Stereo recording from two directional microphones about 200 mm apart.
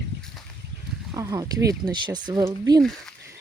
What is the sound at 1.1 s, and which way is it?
Speech, 15° right (ahead or behind).